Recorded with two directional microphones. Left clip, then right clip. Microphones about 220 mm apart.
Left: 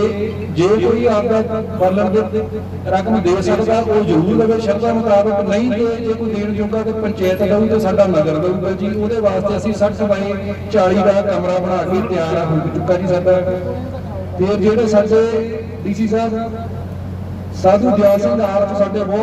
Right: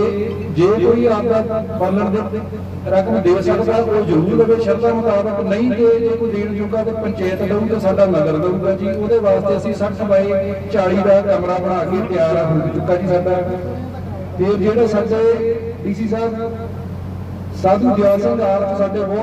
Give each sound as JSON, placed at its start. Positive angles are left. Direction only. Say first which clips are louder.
{"t": 0.5, "sound": "a man's voice", "louder": "right 1 dB", "side_deg": 30}
{"t": 2.9, "sound": "a man's voice", "louder": "right 1 dB", "side_deg": 25}
{"t": 14.4, "sound": "a man's voice", "louder": "even", "side_deg": 25}
{"t": 17.6, "sound": "a man's voice", "louder": "left 2 dB", "side_deg": 25}